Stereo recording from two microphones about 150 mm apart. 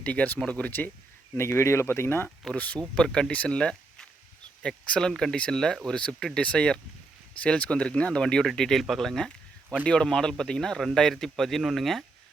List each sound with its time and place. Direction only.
0.0 s speech: 10° left (ahead or behind)